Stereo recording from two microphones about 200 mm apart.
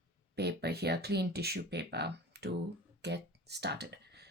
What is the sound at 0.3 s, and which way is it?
Speech, 55° right (ahead or behind).